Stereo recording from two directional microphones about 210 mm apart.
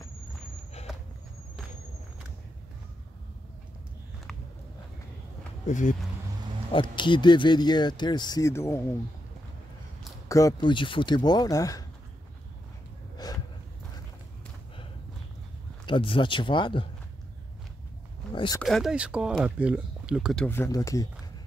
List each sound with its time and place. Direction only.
5.7 s speech: 35° left (ahead or behind)
6.7 s speech: 20° left (ahead or behind)
10.2 s speech: 15° left (ahead or behind)
15.8 s speech: 25° left (ahead or behind)
18.3 s a sound: 25° left (ahead or behind)
18.6 s speech: centre (ahead or behind)
20.4 s speech: 10° left (ahead or behind)